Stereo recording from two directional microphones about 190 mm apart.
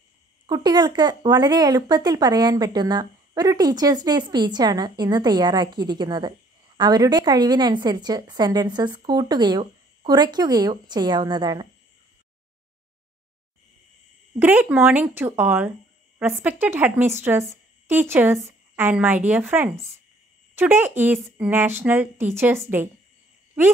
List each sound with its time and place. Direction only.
0.5 s speech: 20° right (ahead or behind)
14.4 s a woman's voice: 10° right (ahead or behind)